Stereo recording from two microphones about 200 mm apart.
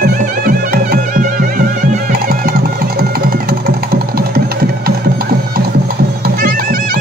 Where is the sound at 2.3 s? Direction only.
50° right (ahead or behind).